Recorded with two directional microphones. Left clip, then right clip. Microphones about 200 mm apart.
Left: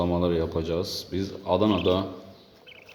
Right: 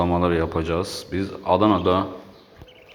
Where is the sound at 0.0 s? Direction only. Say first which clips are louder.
Right 4 dB; 5° left (ahead or behind).